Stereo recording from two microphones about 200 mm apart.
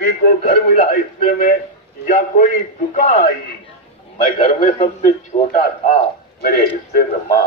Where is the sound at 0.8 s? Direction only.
45° left (ahead or behind).